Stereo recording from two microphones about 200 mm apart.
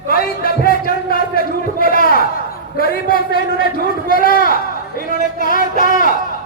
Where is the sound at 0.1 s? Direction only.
50° left (ahead or behind).